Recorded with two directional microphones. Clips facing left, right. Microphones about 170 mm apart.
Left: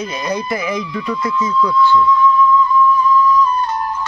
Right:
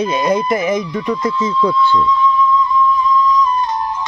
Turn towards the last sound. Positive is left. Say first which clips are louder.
# left 1 dB
turn(degrees=-20)  # may be behind; listen again after turning